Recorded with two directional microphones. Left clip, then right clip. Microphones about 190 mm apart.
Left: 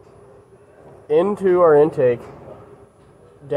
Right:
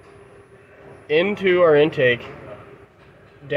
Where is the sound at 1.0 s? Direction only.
25° right (ahead or behind).